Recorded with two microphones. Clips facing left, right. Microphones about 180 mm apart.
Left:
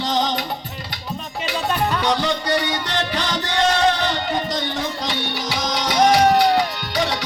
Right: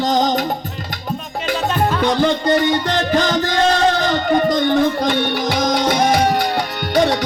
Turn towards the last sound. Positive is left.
turn(degrees=-50)  # may be behind; listen again after turning